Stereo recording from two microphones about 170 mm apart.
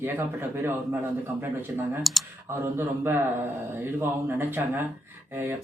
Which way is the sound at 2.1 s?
Centre (ahead or behind).